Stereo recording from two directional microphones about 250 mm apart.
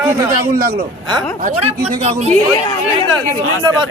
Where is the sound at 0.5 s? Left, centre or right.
Right.